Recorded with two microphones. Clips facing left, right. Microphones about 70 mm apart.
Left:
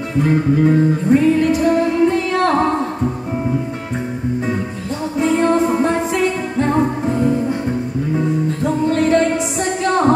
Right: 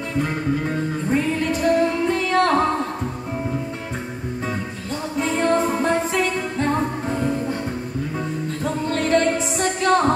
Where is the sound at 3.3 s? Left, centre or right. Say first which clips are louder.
Left 6 dB; centre.